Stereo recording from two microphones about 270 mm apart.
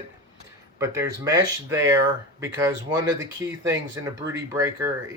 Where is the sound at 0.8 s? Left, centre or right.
Centre.